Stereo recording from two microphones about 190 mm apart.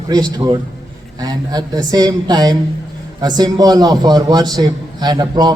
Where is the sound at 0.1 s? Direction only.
20° right (ahead or behind).